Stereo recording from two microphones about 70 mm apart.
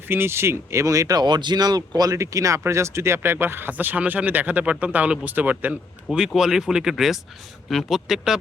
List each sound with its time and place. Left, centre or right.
0.1 s speech: right
1.2 s speech: right
1.9 s speech: right
6.1 s speech: centre